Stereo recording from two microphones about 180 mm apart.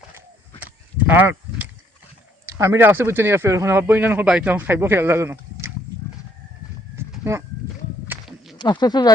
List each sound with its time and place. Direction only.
0.6 s livestock: 10° right (ahead or behind)
2.5 s speech: 15° right (ahead or behind)
8.0 s walk: 10° right (ahead or behind)
8.5 s speech: 25° left (ahead or behind)